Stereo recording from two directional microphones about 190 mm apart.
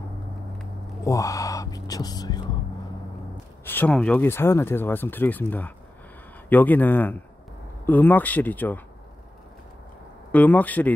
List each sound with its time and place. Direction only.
1.0 s speech: 15° left (ahead or behind)
3.6 s speech: 10° left (ahead or behind)
10.3 s speech: 10° left (ahead or behind)